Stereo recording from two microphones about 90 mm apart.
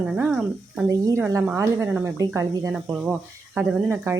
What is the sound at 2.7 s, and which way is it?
Speech, 10° right (ahead or behind).